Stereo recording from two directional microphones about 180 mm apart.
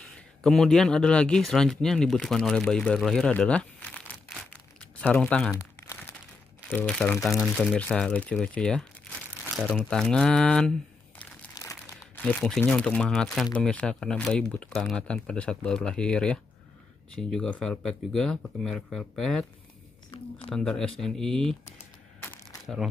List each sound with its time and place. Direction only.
0.0 s speech: 5° left (ahead or behind)
5.6 s crumpling: 15° left (ahead or behind)
6.7 s speech: 5° left (ahead or behind)
9.1 s crumpling: 5° left (ahead or behind)
9.6 s speech: centre (ahead or behind)
11.5 s crumpling: 15° left (ahead or behind)
12.0 s speech: 5° left (ahead or behind)
20.5 s speech: 5° left (ahead or behind)
22.2 s a sound: 10° left (ahead or behind)